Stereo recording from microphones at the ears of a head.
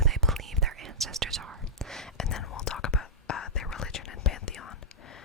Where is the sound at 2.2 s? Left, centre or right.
Left.